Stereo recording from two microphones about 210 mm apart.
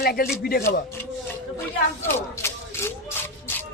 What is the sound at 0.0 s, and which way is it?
Speech, 50° left (ahead or behind).